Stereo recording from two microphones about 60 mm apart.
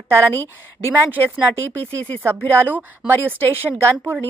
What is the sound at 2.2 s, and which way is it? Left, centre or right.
Speech, right.